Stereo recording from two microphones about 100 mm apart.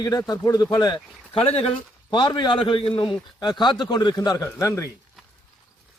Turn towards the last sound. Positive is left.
turn(degrees=30)  # may be behind; listen again after turning